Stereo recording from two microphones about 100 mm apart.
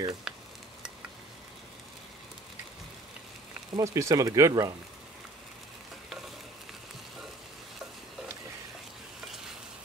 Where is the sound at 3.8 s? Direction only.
30° right (ahead or behind).